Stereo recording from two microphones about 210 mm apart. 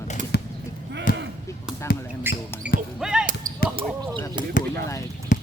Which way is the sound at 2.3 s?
10° right (ahead or behind).